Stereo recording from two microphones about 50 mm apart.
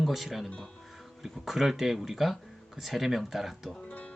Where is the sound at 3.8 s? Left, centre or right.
Left.